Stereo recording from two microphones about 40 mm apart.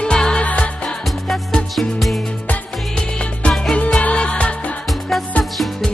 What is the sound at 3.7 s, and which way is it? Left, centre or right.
Music, left.